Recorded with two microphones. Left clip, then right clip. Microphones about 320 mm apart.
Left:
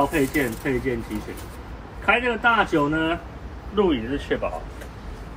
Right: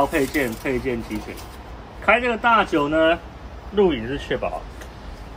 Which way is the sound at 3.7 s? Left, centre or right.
Right.